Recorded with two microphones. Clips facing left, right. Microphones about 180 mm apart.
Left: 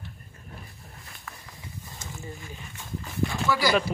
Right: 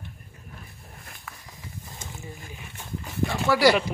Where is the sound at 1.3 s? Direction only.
10° right (ahead or behind).